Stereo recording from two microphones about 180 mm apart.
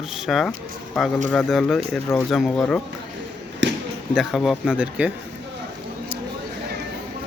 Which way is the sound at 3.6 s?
90° right.